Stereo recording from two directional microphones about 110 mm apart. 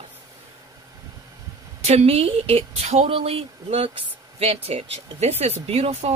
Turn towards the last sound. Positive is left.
turn(degrees=-70)  # may be behind; listen again after turning